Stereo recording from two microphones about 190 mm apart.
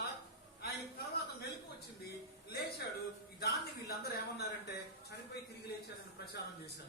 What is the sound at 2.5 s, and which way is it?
Music, 55° left (ahead or behind).